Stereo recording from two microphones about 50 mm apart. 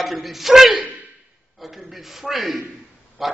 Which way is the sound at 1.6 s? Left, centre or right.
Centre.